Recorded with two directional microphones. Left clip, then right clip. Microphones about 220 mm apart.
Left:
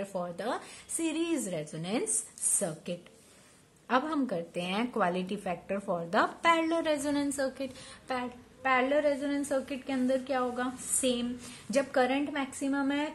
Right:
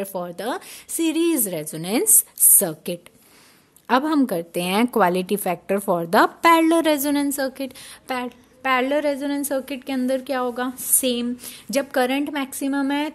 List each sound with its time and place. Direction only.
0.0 s a woman's voice: 45° right (ahead or behind)